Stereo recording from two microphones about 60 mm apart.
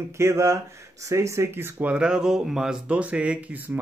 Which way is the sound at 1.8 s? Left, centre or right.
Centre.